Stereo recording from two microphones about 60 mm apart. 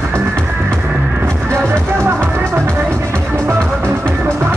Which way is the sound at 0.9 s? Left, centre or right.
Right.